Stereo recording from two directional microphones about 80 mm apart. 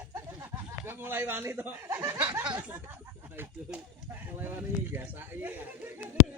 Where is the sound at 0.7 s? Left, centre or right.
Right.